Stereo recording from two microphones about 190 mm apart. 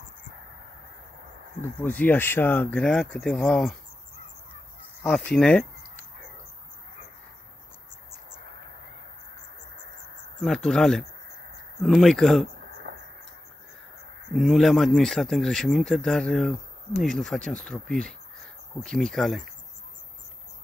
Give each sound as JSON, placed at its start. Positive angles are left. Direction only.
{"t": 1.6, "sound": "speech", "side_deg": 10}
{"t": 5.0, "sound": "speech", "side_deg": 0}
{"t": 10.4, "sound": "speech", "side_deg": 5}
{"t": 12.6, "sound": "a sound", "side_deg": -65}
{"t": 14.3, "sound": "speech", "side_deg": 0}